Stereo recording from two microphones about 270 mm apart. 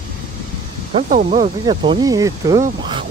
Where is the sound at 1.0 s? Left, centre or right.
Right.